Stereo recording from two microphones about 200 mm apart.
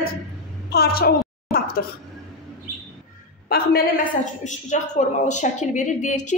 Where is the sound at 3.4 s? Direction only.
50° left (ahead or behind).